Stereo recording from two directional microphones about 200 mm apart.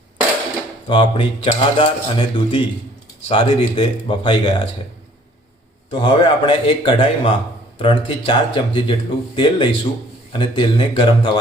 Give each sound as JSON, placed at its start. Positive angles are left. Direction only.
{"t": 0.9, "sound": "speech", "side_deg": 25}
{"t": 5.9, "sound": "speech", "side_deg": 25}